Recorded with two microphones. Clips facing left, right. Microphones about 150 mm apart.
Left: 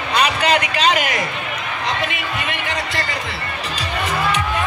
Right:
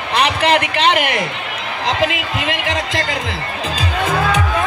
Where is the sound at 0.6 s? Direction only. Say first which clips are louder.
Right 2 dB; 65° right (ahead or behind).